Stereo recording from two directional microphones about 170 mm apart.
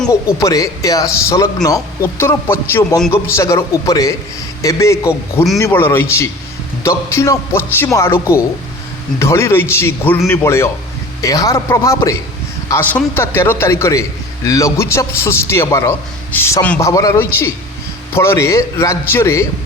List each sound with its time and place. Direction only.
0.1 s a man's voice: 20° left (ahead or behind)